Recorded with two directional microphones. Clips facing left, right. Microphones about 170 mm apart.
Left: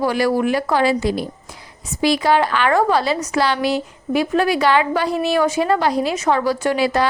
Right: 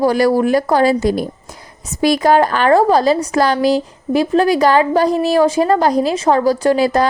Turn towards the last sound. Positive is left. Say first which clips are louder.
# right 4 dB
turn(degrees=-40)  # may be behind; listen again after turning